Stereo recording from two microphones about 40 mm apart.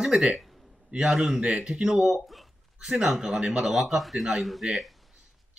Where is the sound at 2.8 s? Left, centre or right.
Centre.